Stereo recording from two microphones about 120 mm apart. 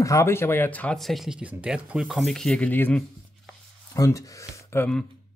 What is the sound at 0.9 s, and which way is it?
Speech, centre (ahead or behind).